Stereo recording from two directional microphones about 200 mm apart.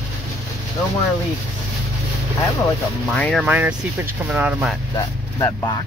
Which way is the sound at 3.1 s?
5° left (ahead or behind).